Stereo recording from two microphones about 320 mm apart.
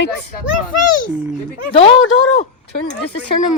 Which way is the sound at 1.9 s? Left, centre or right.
Left.